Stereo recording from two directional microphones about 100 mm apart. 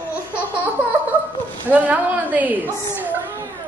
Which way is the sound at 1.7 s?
15° right (ahead or behind).